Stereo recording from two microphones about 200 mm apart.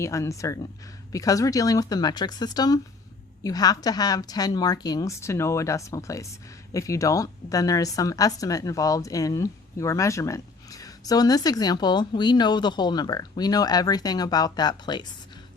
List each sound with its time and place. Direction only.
0.0 s a woman's voice: 15° left (ahead or behind)